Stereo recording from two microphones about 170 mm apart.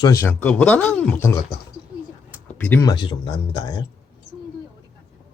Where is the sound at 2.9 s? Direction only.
30° left (ahead or behind).